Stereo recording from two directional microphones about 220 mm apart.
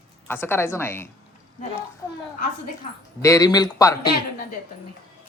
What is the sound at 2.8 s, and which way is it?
Speech, 35° left (ahead or behind).